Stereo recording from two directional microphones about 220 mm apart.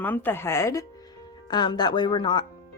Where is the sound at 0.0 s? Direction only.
10° left (ahead or behind).